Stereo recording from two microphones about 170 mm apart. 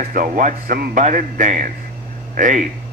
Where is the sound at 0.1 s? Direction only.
50° right (ahead or behind).